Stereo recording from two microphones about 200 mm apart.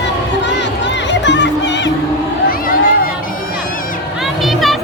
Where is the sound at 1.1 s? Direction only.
65° left (ahead or behind).